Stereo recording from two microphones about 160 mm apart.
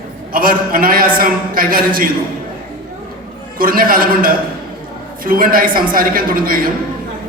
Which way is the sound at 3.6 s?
65° right (ahead or behind).